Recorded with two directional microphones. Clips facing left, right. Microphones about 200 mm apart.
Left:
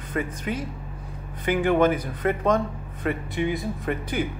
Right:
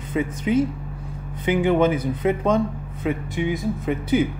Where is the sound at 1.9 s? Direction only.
10° right (ahead or behind).